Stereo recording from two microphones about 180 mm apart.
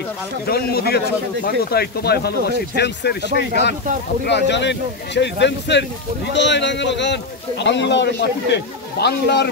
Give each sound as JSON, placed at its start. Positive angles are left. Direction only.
{"t": 0.5, "sound": "a man's voice", "side_deg": 60}